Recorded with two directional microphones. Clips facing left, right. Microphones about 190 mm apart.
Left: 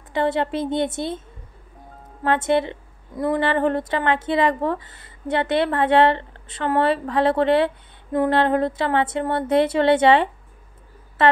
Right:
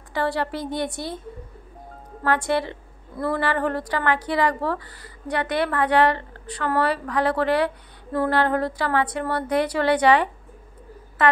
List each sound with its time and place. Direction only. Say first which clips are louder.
0.1 s a woman's voice: left 3 dB; 20° left (ahead or behind)
2.2 s a woman's voice: left 3 dB; 20° left (ahead or behind)